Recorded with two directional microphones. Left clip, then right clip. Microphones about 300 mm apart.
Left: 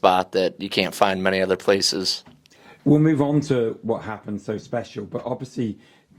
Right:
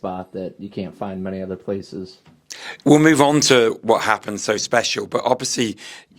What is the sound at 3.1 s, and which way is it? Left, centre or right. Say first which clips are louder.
Speech: right 7 dB; centre.